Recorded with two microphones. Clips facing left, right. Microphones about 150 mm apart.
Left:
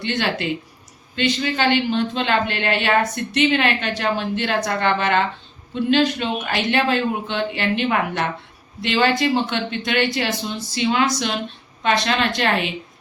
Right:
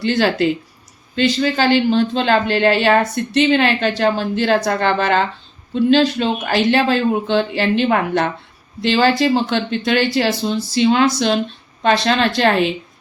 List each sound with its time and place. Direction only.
0.0 s speech: 35° right (ahead or behind)